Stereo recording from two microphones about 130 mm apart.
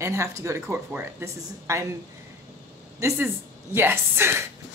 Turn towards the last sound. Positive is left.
turn(degrees=-20)  # may be behind; listen again after turning